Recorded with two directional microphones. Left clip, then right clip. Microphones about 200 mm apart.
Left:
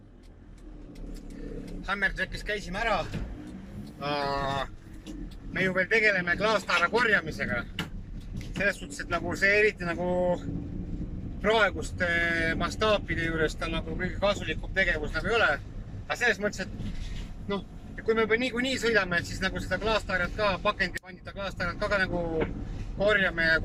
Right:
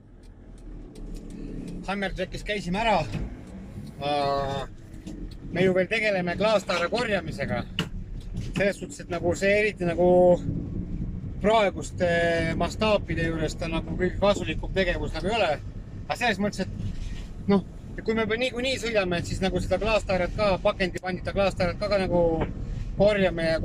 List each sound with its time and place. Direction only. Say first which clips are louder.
1.9 s speech: left 1 dB; 15° right (ahead or behind)
5.5 s speech: right 2 dB; 20° right (ahead or behind)
11.4 s speech: right 2 dB; 20° right (ahead or behind)
18.0 s speech: even; 20° right (ahead or behind)